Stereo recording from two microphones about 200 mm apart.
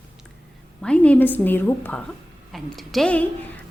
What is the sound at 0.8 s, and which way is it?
A woman's voice, 5° left (ahead or behind).